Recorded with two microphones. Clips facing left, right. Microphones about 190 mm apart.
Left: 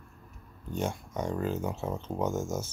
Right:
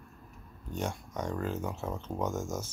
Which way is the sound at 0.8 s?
5° left (ahead or behind).